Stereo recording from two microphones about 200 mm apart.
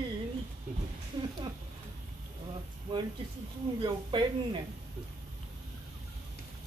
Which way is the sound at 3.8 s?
25° right (ahead or behind).